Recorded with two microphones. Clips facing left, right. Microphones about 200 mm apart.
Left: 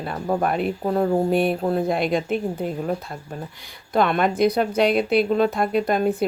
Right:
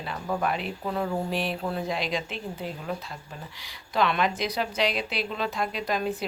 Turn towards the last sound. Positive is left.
turn(degrees=55)  # may be behind; listen again after turning